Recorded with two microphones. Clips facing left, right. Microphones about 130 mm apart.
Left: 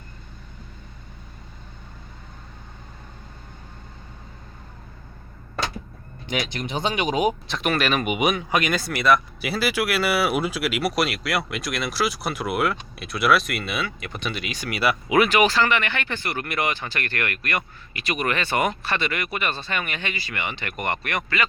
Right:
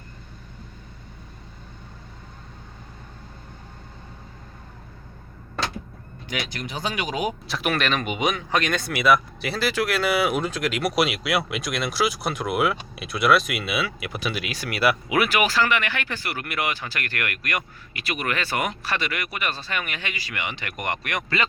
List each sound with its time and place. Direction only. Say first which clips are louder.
6.2 s speech: left 3 dB; 25° left (ahead or behind)
7.4 s speech: left 1 dB; 5° right (ahead or behind)